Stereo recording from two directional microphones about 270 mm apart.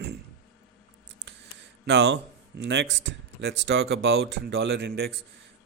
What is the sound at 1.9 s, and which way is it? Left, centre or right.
A man's voice, right.